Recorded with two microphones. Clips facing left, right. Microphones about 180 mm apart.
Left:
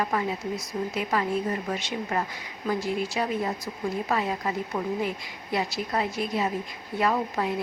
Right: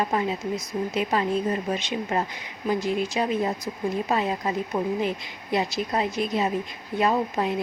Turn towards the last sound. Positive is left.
turn(degrees=-20)  # may be behind; listen again after turning